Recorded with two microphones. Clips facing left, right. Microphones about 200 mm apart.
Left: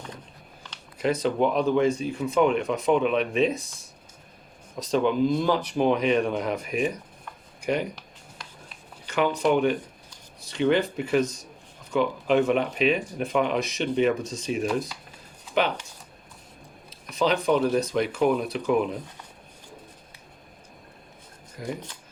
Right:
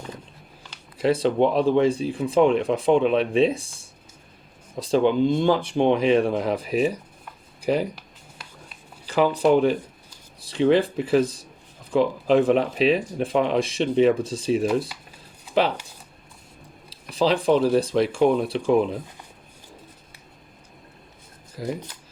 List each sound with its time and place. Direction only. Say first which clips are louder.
0.9 s speech: right 4 dB; 30° right (ahead or behind)
9.0 s speech: right 4 dB; 35° right (ahead or behind)
16.9 s speech: right 3 dB; 30° right (ahead or behind)